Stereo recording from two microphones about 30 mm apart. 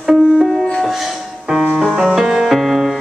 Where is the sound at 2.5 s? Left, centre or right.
Centre.